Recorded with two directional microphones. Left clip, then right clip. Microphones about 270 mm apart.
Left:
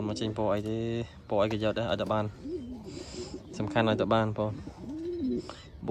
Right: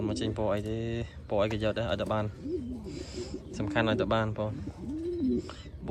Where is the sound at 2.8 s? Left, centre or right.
Centre.